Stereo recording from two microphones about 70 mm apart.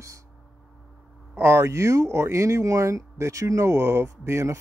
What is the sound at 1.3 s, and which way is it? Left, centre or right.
Speech, right.